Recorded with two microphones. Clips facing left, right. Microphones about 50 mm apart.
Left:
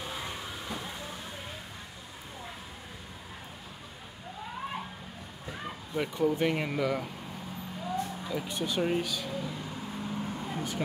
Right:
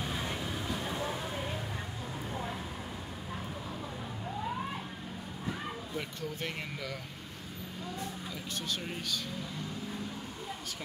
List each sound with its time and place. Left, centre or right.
5.9 s speech: centre
8.3 s speech: centre